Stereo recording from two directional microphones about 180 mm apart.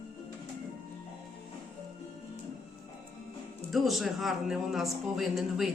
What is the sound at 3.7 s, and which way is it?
A woman's voice, centre (ahead or behind).